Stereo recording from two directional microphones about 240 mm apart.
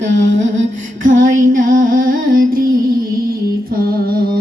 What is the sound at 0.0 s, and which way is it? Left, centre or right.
Music, right.